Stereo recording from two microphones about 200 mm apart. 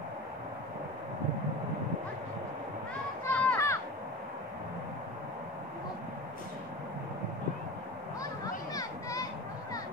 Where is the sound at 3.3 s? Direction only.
10° left (ahead or behind).